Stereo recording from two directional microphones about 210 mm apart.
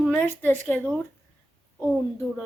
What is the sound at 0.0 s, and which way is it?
Speech, 5° left (ahead or behind).